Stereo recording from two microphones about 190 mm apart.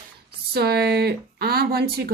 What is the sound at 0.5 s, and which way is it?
A woman's voice, 60° right (ahead or behind).